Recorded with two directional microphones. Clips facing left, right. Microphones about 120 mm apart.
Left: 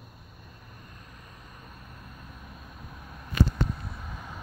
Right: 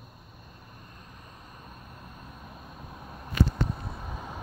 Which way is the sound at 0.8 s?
25° right (ahead or behind).